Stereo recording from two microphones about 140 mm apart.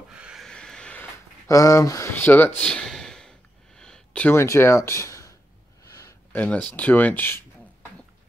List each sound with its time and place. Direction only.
0.1 s vehicle: 5° right (ahead or behind)
1.5 s speech: 25° left (ahead or behind)
5.9 s a sound: 25° left (ahead or behind)
6.3 s speech: 10° left (ahead or behind)